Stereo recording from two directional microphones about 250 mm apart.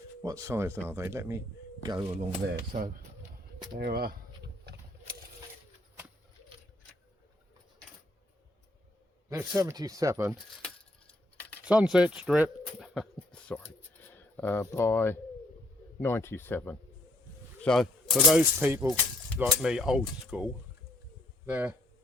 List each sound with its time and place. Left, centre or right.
0.2 s speech: centre
2.7 s speech: right
9.3 s speech: centre
11.6 s speech: centre